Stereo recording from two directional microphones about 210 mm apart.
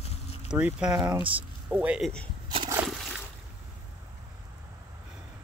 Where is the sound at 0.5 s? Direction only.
5° right (ahead or behind).